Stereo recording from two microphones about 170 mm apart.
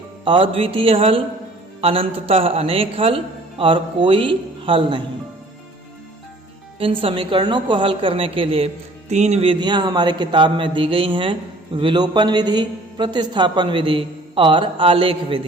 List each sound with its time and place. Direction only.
0.3 s a man's voice: 30° right (ahead or behind)
6.7 s a woman's voice: 35° right (ahead or behind)